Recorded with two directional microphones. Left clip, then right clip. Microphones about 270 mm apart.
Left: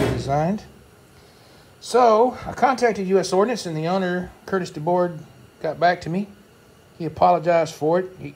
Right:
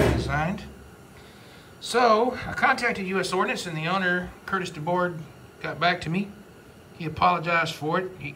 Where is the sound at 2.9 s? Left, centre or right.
Centre.